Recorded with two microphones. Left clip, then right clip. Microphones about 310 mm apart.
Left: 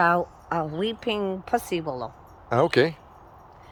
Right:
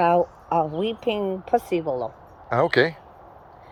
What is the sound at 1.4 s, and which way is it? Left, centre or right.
Speech, left.